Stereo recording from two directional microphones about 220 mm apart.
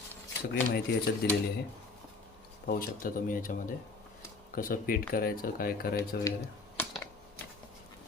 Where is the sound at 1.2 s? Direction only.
50° left (ahead or behind).